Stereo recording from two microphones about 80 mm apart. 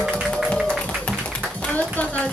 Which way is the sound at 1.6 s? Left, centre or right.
Centre.